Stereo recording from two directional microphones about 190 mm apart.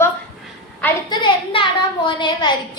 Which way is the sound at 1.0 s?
25° left (ahead or behind).